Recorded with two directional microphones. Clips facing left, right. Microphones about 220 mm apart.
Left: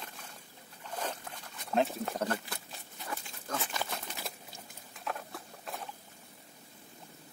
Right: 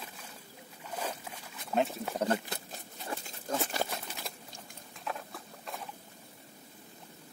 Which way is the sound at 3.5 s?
45° right (ahead or behind).